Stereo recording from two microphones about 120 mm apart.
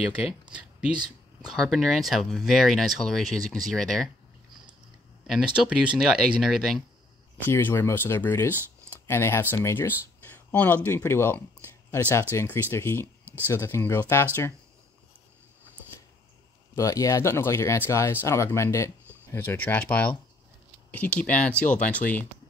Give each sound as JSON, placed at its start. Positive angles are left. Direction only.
{"t": 0.0, "sound": "speech", "side_deg": -10}
{"t": 5.2, "sound": "speech", "side_deg": -5}
{"t": 7.4, "sound": "speech", "side_deg": 20}
{"t": 16.7, "sound": "speech", "side_deg": 30}
{"t": 21.6, "sound": "speech", "side_deg": 90}